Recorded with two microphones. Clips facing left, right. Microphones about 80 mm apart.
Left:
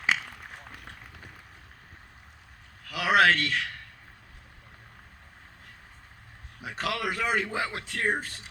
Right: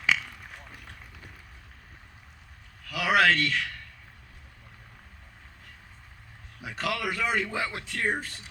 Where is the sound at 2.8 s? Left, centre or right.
Left.